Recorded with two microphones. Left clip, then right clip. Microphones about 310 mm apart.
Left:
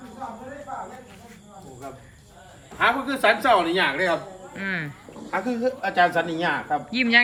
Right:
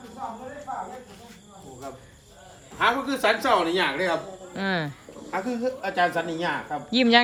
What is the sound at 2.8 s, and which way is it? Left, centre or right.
Speech, centre.